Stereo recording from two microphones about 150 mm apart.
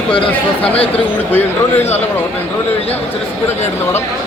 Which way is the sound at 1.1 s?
15° left (ahead or behind).